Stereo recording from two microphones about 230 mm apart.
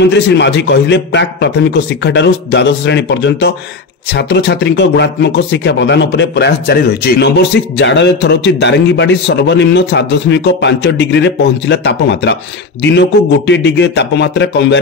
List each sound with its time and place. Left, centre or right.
0.0 s speech: left